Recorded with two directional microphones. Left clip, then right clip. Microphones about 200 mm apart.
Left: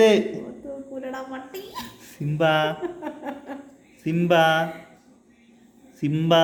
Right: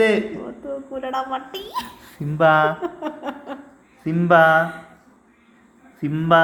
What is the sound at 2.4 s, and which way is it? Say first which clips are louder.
Mantra: right 5 dB; 10° left (ahead or behind).